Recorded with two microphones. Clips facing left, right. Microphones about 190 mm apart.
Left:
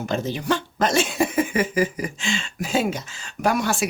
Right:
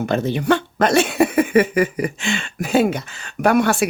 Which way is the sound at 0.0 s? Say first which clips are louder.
Right 6 dB; 60° right (ahead or behind).